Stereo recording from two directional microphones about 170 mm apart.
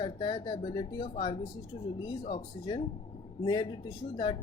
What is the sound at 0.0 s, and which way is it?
Speech, 30° left (ahead or behind).